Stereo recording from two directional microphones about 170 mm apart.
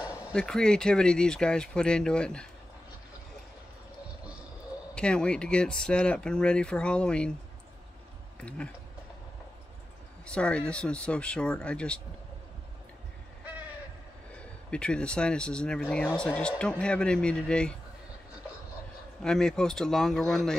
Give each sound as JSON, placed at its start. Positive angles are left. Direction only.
{"t": 0.0, "sound": "a sound", "side_deg": 20}
{"t": 0.3, "sound": "speech", "side_deg": 5}
{"t": 4.9, "sound": "speech", "side_deg": 5}
{"t": 8.4, "sound": "speech", "side_deg": 5}
{"t": 10.2, "sound": "speech", "side_deg": 5}
{"t": 14.7, "sound": "speech", "side_deg": 5}
{"t": 19.2, "sound": "speech", "side_deg": 5}